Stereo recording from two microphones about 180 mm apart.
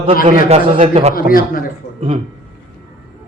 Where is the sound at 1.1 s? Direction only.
55° left (ahead or behind).